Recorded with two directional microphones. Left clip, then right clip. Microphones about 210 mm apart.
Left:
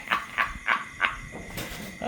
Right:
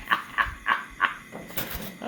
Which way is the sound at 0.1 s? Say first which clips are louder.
Right 2 dB; 20° left (ahead or behind).